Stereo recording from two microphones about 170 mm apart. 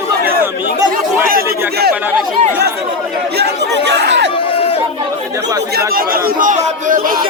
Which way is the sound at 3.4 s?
90° right.